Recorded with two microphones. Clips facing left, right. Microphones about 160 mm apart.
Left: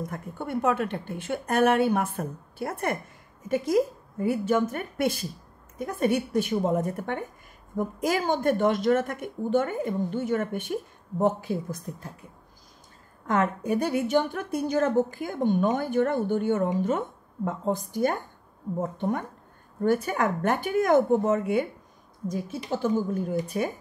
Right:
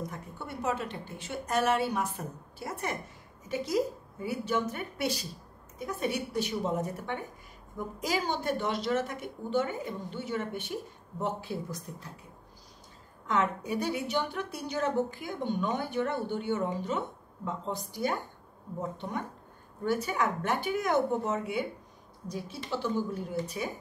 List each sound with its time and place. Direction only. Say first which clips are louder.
0.1 s a woman's voice: left 9 dB; 55° left (ahead or behind)
13.3 s a woman's voice: left 5 dB; 50° left (ahead or behind)